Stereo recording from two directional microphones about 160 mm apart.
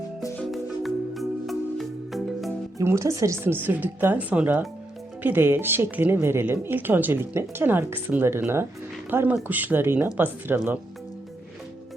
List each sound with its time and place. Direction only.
0.3 s music: centre (ahead or behind)
2.7 s speech: 20° right (ahead or behind)